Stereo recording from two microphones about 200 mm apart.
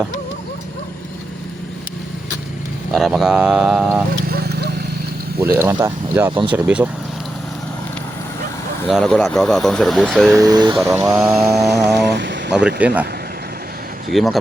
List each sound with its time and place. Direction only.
2.9 s speech: centre (ahead or behind)
4.3 s a sound: 50° right (ahead or behind)
5.4 s speech: 10° right (ahead or behind)
8.9 s speech: centre (ahead or behind)
10.3 s speech: 20° right (ahead or behind)
11.0 s speech: 5° right (ahead or behind)
12.0 s vehicle: 60° right (ahead or behind)
12.5 s speech: 5° right (ahead or behind)
14.1 s speech: centre (ahead or behind)